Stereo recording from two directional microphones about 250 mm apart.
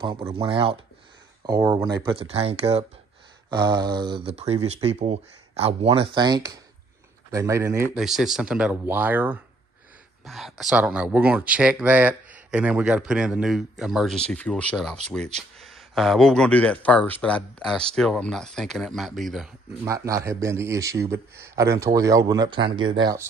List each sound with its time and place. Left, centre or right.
0.0 s a man's voice: centre
19.8 s a man's voice: centre